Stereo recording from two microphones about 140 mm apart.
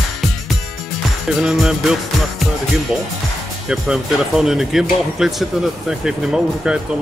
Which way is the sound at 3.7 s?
5° right (ahead or behind).